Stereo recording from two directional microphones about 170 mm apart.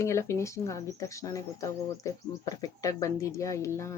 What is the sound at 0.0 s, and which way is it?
Speech, 15° left (ahead or behind).